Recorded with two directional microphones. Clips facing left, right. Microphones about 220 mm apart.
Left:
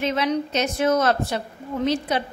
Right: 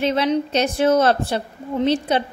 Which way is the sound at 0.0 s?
30° right (ahead or behind).